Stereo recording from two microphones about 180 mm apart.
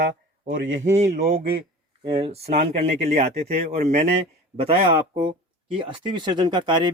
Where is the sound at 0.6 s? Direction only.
90° right.